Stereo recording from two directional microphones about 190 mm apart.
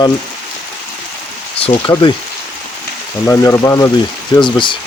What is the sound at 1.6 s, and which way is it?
Speech, 25° left (ahead or behind).